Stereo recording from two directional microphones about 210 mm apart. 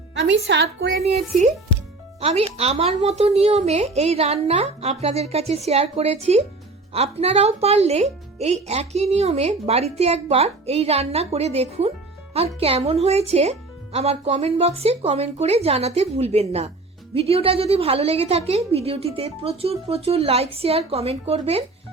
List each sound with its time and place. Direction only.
0.1 s a woman's voice: 55° right (ahead or behind)
2.2 s speech: 30° right (ahead or behind)